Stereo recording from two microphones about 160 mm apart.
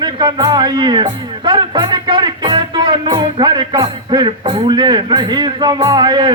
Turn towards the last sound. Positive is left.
turn(degrees=-30)  # may be behind; listen again after turning